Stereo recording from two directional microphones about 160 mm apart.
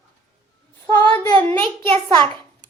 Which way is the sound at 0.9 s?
15° left (ahead or behind).